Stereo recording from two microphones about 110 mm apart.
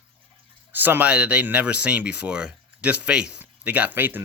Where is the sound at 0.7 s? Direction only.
15° right (ahead or behind).